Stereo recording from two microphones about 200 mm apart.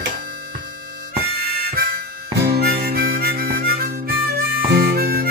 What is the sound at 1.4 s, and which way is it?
Harmonica, 50° right (ahead or behind).